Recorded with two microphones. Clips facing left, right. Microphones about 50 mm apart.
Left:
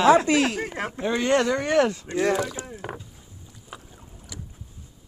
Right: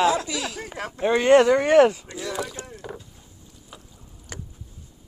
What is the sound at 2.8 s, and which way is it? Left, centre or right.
Boat, left.